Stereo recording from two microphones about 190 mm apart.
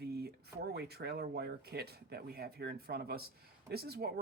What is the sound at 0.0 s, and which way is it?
Speech, 60° right (ahead or behind).